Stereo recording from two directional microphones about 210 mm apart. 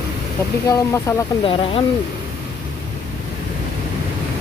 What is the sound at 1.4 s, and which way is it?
Speech, 25° left (ahead or behind).